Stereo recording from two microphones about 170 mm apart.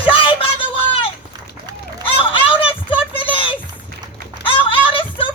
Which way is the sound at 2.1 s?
30° left (ahead or behind).